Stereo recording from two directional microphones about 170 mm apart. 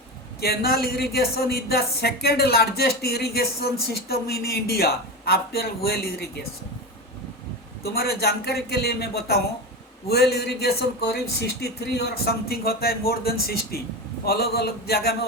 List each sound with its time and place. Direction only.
0.4 s speech: 65° left (ahead or behind)
7.9 s a man's voice: 65° left (ahead or behind)